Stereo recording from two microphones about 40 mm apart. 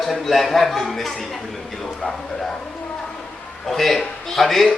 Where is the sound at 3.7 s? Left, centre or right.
Centre.